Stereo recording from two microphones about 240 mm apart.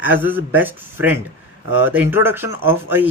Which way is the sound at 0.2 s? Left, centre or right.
Centre.